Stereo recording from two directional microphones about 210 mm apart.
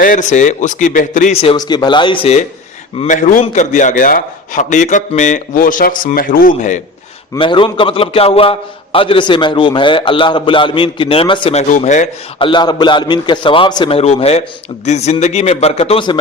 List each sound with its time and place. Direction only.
0.0 s a man's voice: 35° left (ahead or behind)
3.0 s a man's voice: 35° left (ahead or behind)
7.3 s a man's voice: 25° left (ahead or behind)
11.7 s a man's voice: 35° left (ahead or behind)
12.5 s a man's voice: 20° left (ahead or behind)